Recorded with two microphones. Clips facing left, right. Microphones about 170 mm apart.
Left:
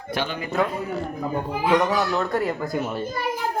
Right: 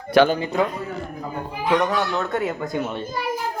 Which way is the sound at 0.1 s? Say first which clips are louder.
Right 13 dB; 75° right (ahead or behind).